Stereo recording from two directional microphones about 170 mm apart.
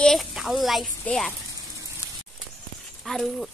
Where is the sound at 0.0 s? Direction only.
Centre (ahead or behind).